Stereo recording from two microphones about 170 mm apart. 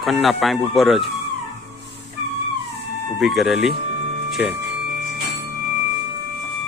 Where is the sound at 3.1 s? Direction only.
Centre (ahead or behind).